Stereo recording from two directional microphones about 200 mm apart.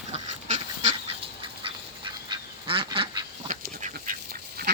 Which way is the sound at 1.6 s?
25° right (ahead or behind).